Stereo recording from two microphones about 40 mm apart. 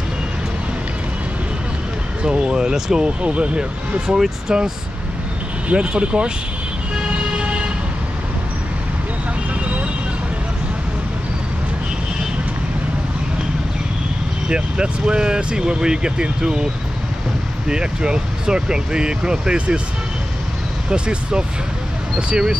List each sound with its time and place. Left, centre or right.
2.2 s speech: right
3.2 s speech: right
4.2 s speech: centre
5.7 s speech: right
7.0 s vehicle: right
14.5 s speech: right
17.6 s speech: right
20.9 s speech: right